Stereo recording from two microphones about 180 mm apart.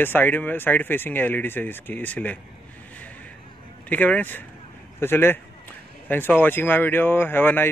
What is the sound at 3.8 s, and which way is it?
Speech, 10° left (ahead or behind).